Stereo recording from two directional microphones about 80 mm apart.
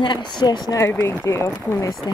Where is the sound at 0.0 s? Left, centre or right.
Left.